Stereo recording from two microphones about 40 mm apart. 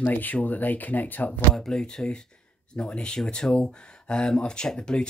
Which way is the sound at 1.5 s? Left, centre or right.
Centre.